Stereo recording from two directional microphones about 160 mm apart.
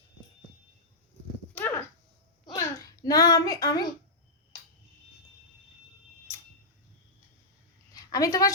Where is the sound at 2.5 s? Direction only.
20° left (ahead or behind).